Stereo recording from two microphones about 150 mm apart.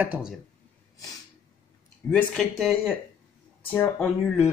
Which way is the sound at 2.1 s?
5° left (ahead or behind).